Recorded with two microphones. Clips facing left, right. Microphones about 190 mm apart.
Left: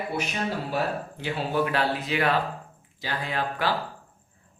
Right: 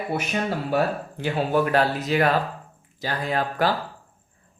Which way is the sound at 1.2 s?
45° right (ahead or behind).